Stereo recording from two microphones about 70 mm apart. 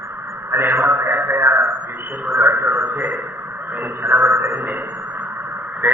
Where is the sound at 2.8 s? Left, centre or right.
Right.